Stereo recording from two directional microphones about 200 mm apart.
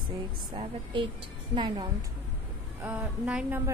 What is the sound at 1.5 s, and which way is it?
Speech, 20° right (ahead or behind).